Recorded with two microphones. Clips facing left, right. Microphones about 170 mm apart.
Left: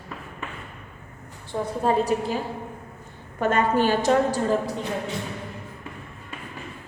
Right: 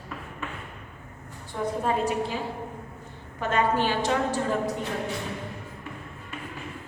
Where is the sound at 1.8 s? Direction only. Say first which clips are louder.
Left 5 dB; 35° left (ahead or behind).